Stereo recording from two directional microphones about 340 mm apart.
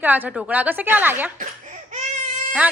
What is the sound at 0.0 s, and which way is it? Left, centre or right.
Speech, centre.